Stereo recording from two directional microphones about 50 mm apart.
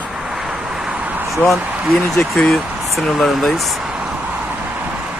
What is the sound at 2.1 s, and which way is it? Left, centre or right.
Speech, centre.